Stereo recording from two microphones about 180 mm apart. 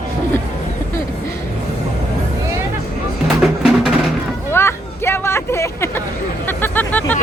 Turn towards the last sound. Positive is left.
turn(degrees=10)  # may be behind; listen again after turning